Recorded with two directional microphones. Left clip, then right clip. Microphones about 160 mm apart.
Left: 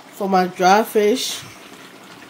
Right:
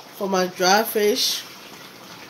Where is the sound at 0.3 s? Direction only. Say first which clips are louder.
Left 4 dB; 85° left.